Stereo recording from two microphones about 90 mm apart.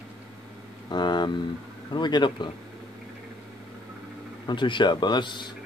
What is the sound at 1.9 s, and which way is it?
Speech, 55° left (ahead or behind).